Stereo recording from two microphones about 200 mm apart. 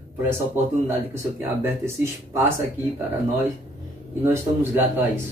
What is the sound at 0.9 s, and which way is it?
Speech, 10° right (ahead or behind).